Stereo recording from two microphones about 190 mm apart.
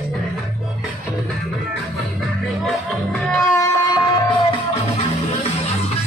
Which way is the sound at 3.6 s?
20° left (ahead or behind).